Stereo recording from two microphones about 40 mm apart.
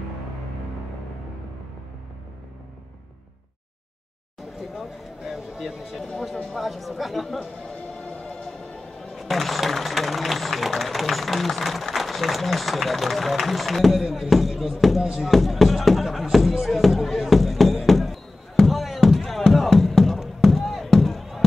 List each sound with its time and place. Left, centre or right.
4.7 s a sound: centre
6.6 s speech: centre
7.9 s music: centre
9.1 s speech: centre
15.1 s music: centre